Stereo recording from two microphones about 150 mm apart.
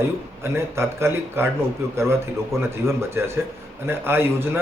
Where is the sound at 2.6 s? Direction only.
15° right (ahead or behind).